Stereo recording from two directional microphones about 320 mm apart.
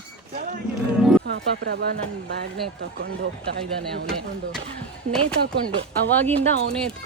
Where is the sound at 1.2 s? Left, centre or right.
Right.